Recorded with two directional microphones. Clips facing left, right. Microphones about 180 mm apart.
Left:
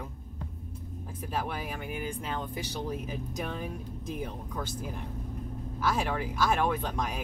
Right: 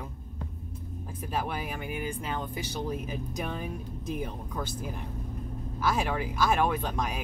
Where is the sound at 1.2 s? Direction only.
5° right (ahead or behind).